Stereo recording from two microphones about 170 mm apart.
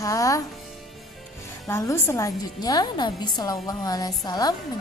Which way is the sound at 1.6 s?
15° left (ahead or behind).